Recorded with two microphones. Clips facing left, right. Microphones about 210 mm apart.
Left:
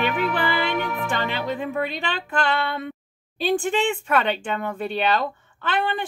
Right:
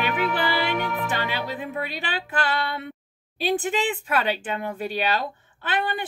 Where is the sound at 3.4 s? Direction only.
5° right (ahead or behind).